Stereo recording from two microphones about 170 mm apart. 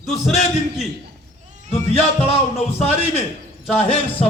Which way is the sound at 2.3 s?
40° left (ahead or behind).